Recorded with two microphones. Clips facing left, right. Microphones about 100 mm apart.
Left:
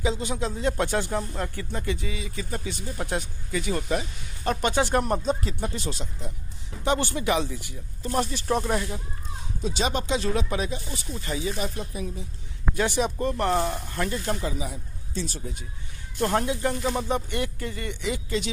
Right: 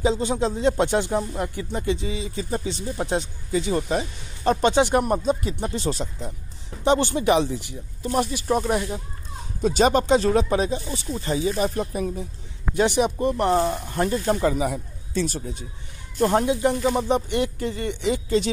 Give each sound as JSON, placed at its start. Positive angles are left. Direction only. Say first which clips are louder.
{"t": 0.0, "sound": "speech", "louder": "right 6 dB", "side_deg": -30}
{"t": 5.6, "sound": "speech", "louder": "right 5 dB", "side_deg": -30}
{"t": 6.8, "sound": "speech", "louder": "right 5 dB", "side_deg": -25}
{"t": 8.0, "sound": "speech", "louder": "right 3 dB", "side_deg": -15}
{"t": 9.6, "sound": "speech", "louder": "right 9 dB", "side_deg": -50}
{"t": 12.7, "sound": "speech", "louder": "right 5 dB", "side_deg": -20}
{"t": 13.8, "sound": "speech", "louder": "right 6 dB", "side_deg": -30}
{"t": 14.4, "sound": "speech", "louder": "right 9 dB", "side_deg": -60}
{"t": 16.2, "sound": "speech", "louder": "right 5 dB", "side_deg": -15}